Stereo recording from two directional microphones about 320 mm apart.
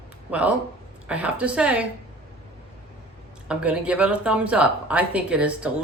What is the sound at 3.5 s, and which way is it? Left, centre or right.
Speech, centre.